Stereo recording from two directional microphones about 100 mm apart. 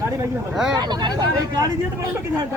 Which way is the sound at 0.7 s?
45° right (ahead or behind).